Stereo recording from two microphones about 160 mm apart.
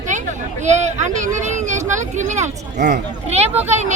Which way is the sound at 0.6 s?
45° right (ahead or behind).